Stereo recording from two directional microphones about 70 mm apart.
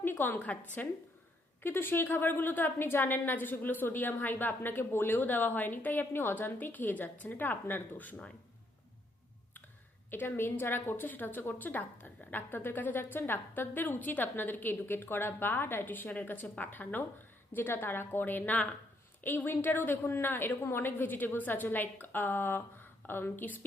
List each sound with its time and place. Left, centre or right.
0.0 s a sound: left
0.3 s a woman's voice: centre
1.6 s a woman's voice: left
10.1 s a woman's voice: left